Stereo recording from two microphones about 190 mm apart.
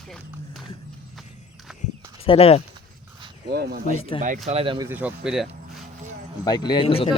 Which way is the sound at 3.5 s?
60° right (ahead or behind).